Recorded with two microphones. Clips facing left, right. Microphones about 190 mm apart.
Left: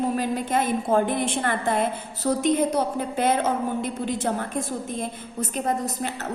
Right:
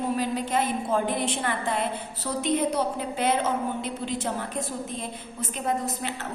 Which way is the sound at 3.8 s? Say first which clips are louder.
Left 3 dB; 50° left (ahead or behind).